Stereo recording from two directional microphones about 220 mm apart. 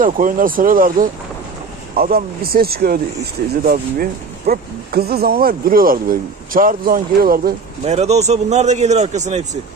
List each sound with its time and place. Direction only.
0.0 s speech: 40° right (ahead or behind)
7.8 s speech: 30° right (ahead or behind)